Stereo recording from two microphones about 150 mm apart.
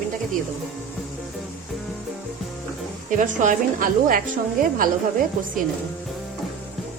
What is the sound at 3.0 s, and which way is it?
A woman's voice, 60° right (ahead or behind).